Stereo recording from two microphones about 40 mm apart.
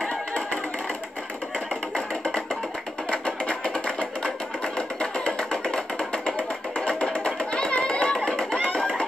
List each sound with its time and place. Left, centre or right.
2.0 s music: left
6.8 s music: left
8.3 s a sound: centre